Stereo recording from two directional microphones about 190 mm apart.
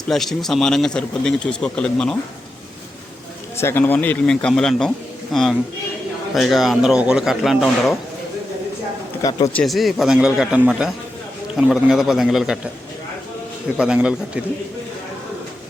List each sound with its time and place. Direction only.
0.1 s speech: centre (ahead or behind)
3.6 s speech: 10° left (ahead or behind)
9.2 s a man's voice: 20° left (ahead or behind)
9.6 s speech: centre (ahead or behind)
13.7 s speech: 5° right (ahead or behind)